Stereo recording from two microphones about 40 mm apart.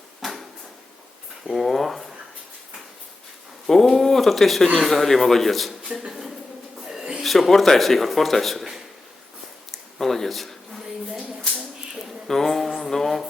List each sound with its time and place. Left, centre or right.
0.2 s a sound: centre
1.5 s speech: centre
3.7 s speech: centre
5.9 s speech: centre
6.9 s bird: centre
7.2 s speech: centre
9.7 s a sound: centre
12.3 s speech: centre
12.6 s a sound: centre